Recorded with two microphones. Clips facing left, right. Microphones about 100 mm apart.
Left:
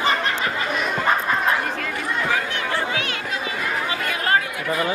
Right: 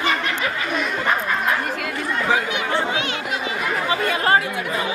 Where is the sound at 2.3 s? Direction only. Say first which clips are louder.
Right 3 dB; 20° right (ahead or behind).